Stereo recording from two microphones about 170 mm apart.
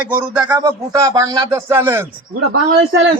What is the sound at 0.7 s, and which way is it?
Speech, 20° right (ahead or behind).